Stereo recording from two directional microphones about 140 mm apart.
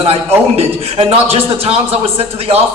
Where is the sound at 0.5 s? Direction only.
45° right (ahead or behind).